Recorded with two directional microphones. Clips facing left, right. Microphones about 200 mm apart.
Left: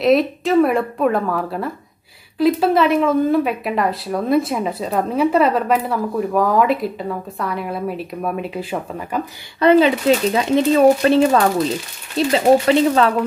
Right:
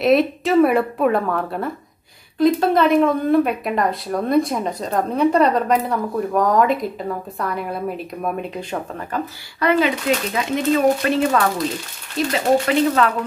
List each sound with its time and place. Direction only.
0.0 s speech: centre (ahead or behind)
9.6 s speech: 30° left (ahead or behind)